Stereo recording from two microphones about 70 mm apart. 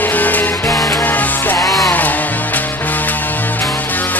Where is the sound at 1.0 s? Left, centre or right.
Left.